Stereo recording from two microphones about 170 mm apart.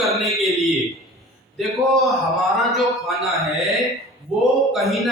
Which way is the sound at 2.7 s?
Centre (ahead or behind).